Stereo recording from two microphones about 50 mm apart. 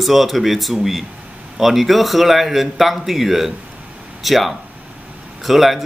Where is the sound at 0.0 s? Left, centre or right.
Centre.